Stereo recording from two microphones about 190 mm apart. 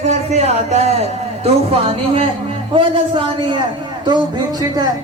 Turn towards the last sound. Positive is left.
turn(degrees=-20)  # may be behind; listen again after turning